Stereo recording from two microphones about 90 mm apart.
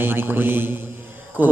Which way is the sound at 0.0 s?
25° right (ahead or behind).